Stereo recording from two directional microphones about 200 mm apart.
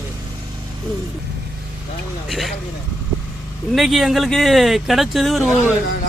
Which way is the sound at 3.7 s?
Centre (ahead or behind).